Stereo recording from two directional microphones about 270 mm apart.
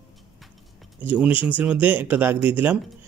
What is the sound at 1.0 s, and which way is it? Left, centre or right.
Speech, centre.